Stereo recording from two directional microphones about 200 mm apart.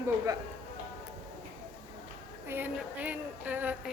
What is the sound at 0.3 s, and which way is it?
Speech, 20° right (ahead or behind).